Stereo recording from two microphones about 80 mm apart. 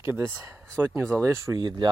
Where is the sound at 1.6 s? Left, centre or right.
Right.